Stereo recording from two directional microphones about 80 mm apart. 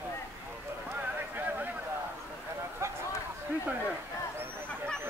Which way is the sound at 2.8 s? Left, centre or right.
Right.